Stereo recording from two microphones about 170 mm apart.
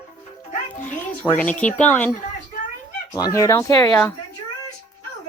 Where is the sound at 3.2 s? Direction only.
20° left (ahead or behind).